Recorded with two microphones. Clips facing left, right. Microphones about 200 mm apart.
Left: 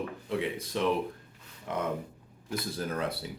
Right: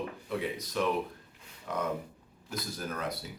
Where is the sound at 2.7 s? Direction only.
30° left (ahead or behind).